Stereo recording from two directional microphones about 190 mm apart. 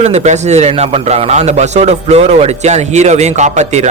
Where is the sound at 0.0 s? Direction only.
35° right (ahead or behind).